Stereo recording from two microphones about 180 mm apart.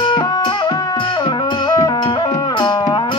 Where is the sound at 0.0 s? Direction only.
25° left (ahead or behind).